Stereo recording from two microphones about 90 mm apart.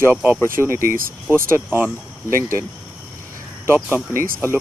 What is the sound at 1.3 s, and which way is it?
Speech, 25° right (ahead or behind).